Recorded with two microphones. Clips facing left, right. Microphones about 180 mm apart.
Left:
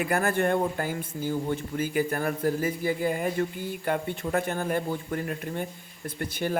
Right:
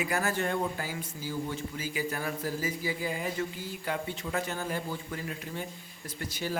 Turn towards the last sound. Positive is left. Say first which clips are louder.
# left 6 dB
turn(degrees=55)  # may be behind; listen again after turning